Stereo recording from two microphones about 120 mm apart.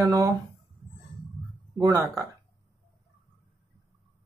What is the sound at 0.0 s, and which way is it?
Speech, 30° right (ahead or behind).